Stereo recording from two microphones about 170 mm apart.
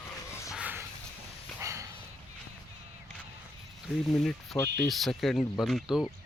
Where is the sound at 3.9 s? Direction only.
Centre (ahead or behind).